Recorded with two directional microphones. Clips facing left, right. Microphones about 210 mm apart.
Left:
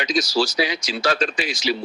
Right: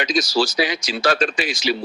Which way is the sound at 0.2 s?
50° right (ahead or behind).